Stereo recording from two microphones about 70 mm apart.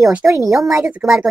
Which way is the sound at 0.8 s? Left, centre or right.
Centre.